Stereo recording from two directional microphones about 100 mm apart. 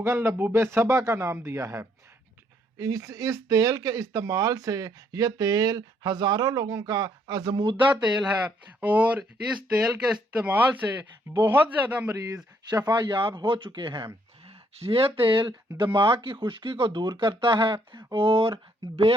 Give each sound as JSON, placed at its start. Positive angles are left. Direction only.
{"t": 0.0, "sound": "speech", "side_deg": -25}
{"t": 8.0, "sound": "speech", "side_deg": -10}
{"t": 12.7, "sound": "speech", "side_deg": -45}
{"t": 14.4, "sound": "speech", "side_deg": -75}